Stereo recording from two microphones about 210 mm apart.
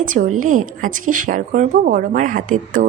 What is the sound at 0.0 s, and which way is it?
A woman's voice, 40° right (ahead or behind).